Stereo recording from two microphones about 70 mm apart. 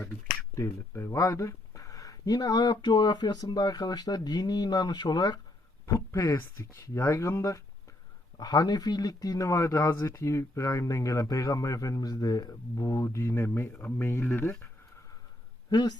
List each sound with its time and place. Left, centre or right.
0.5 s speech: left
5.8 s speech: left
8.4 s speech: left
15.7 s speech: left